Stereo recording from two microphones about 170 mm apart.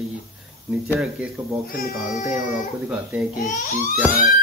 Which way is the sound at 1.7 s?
60° left (ahead or behind).